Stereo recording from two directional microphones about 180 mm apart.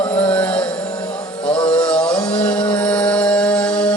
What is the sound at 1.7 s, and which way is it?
Music, 5° left (ahead or behind).